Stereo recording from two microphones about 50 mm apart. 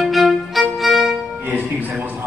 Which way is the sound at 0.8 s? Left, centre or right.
Centre.